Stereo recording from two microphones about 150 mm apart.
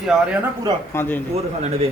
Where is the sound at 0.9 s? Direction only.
15° left (ahead or behind).